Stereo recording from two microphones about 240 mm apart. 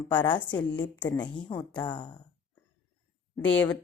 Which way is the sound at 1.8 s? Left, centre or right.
Centre.